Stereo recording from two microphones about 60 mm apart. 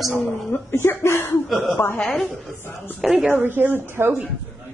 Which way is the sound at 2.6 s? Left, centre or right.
Left.